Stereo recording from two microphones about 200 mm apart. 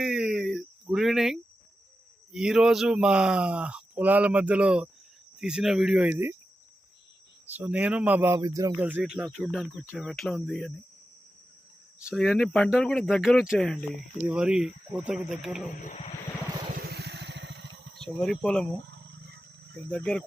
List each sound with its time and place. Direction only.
0.0 s a sound: 5° right (ahead or behind)
2.3 s speech: centre (ahead or behind)
7.5 s speech: 10° right (ahead or behind)
12.1 s speech: centre (ahead or behind)
15.6 s speech: 40° left (ahead or behind)
16.7 s motorcycle: 50° right (ahead or behind)
18.0 s speech: centre (ahead or behind)
18.9 s wild animals: 60° right (ahead or behind)
19.9 s speech: 5° left (ahead or behind)